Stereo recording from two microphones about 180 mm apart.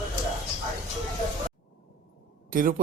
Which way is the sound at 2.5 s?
50° right (ahead or behind).